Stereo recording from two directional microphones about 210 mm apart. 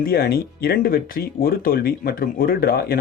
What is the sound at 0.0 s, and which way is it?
Speech, 50° left (ahead or behind).